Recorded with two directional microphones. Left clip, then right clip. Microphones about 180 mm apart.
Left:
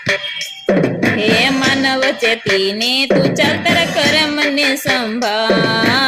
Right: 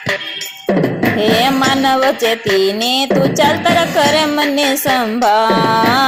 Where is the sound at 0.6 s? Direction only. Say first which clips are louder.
Even; 30° left (ahead or behind).